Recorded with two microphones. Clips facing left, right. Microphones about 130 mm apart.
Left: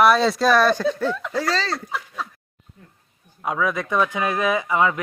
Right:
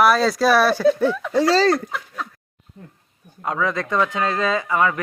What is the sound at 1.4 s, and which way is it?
Speech, 35° right (ahead or behind).